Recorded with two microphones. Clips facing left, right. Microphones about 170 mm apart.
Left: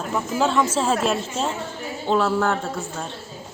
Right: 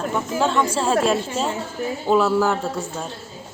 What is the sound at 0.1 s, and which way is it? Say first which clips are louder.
Speech: left 2 dB; centre (ahead or behind).